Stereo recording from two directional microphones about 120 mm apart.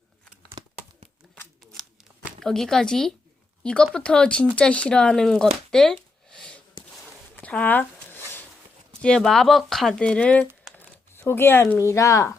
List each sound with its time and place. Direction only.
0.6 s a sound: 40° right (ahead or behind)
2.4 s speech: 5° left (ahead or behind)
7.3 s zipper: 10° left (ahead or behind)
9.0 s speech: 5° left (ahead or behind)
10.8 s speech: 20° left (ahead or behind)